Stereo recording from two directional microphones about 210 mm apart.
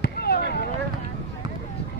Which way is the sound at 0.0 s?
50° left (ahead or behind).